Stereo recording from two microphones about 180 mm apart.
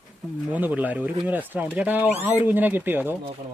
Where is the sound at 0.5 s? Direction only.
10° right (ahead or behind).